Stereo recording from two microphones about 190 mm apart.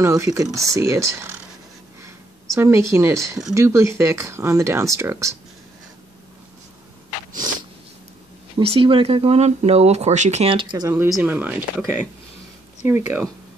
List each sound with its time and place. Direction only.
0.0 s speech: 15° right (ahead or behind)
2.0 s a sound: 15° right (ahead or behind)
3.5 s speech: 15° right (ahead or behind)
8.5 s speech: 30° right (ahead or behind); by 13.3 s 10° right (ahead or behind)